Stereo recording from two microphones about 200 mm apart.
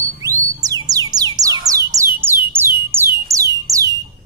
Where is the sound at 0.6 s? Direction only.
20° right (ahead or behind).